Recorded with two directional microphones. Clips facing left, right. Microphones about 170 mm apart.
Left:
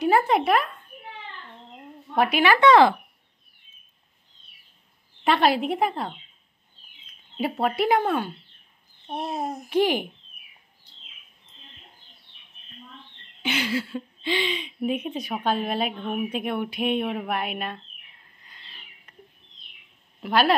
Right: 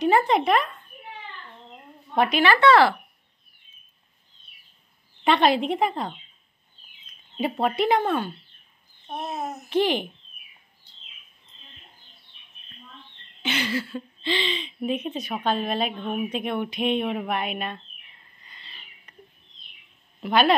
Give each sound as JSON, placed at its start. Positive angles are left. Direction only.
{"t": 0.0, "sound": "speech", "side_deg": 5}
{"t": 2.1, "sound": "speech", "side_deg": 10}
{"t": 5.2, "sound": "speech", "side_deg": 5}
{"t": 7.3, "sound": "speech", "side_deg": 5}
{"t": 13.4, "sound": "speech", "side_deg": 10}
{"t": 18.4, "sound": "owl", "side_deg": 0}
{"t": 20.2, "sound": "a woman's voice", "side_deg": 5}